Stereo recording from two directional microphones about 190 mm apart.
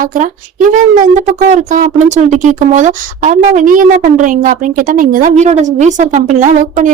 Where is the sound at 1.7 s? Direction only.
40° right (ahead or behind).